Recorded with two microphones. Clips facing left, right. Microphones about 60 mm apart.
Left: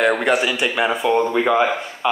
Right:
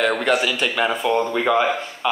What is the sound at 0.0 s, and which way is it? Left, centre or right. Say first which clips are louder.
A man's voice: left 2 dB; centre.